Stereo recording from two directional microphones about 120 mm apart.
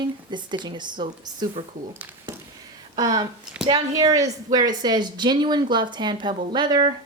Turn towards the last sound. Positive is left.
turn(degrees=-35)  # may be behind; listen again after turning